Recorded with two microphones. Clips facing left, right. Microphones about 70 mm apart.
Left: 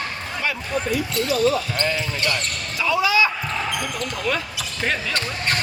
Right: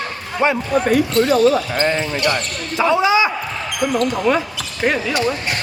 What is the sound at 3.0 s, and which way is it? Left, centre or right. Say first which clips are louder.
Basketball bounce: right 1 dB; right.